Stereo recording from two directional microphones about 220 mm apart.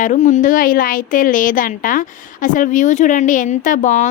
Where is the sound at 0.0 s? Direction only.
35° left (ahead or behind).